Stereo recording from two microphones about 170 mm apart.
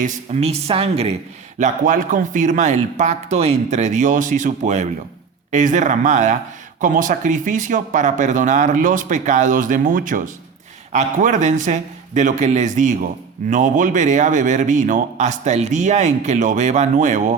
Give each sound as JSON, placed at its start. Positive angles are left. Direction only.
{"t": 0.0, "sound": "speech", "side_deg": -45}
{"t": 1.5, "sound": "speech", "side_deg": -50}